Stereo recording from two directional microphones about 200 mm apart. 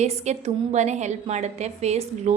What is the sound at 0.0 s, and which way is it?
A woman's voice, 35° right (ahead or behind).